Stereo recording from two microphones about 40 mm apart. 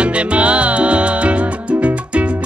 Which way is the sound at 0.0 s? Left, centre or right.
Right.